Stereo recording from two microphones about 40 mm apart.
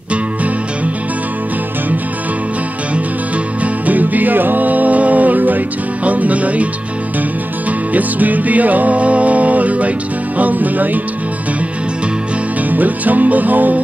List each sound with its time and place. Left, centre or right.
3.8 s music: right
7.9 s music: right
12.7 s music: right